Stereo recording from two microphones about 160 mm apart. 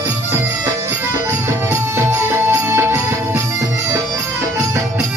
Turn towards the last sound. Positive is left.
turn(degrees=-15)  # may be behind; listen again after turning